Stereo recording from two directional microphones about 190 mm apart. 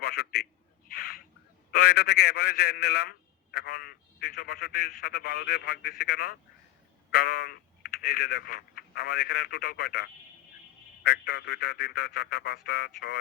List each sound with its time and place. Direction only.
0.0 s a man's voice: 55° left (ahead or behind)
0.9 s bird: 50° left (ahead or behind)
1.7 s speech: 55° left (ahead or behind)